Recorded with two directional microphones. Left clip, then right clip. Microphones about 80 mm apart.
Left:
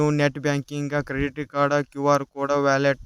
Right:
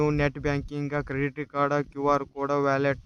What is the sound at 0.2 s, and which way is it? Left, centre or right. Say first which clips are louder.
Speech: left 4 dB; left.